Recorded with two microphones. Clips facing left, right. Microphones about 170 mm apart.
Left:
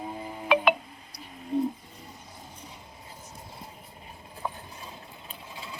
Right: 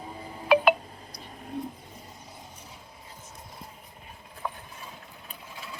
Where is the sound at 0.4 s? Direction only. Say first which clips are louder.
Right 2 dB; 5° right (ahead or behind).